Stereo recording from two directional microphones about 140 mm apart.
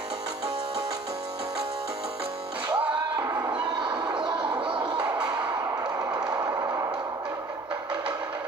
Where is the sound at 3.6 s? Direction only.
30° right (ahead or behind).